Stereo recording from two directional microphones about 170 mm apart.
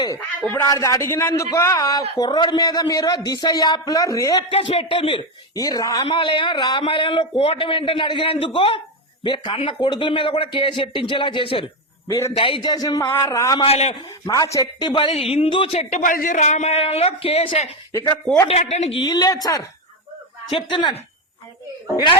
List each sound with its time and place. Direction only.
0.4 s a man's voice: 15° left (ahead or behind); by 11.6 s 30° left (ahead or behind)
12.0 s a man's voice: 20° left (ahead or behind)
13.6 s a man's voice: 35° left (ahead or behind)
14.3 s a man's voice: 20° left (ahead or behind)